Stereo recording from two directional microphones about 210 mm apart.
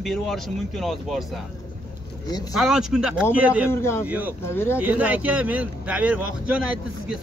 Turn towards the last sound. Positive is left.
turn(degrees=-5)  # may be behind; listen again after turning